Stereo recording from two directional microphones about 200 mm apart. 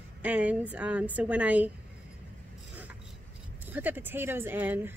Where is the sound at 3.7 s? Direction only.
10° right (ahead or behind).